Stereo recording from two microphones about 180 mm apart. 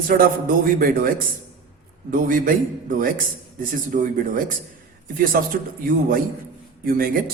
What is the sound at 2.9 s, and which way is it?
A man's voice, 50° right (ahead or behind).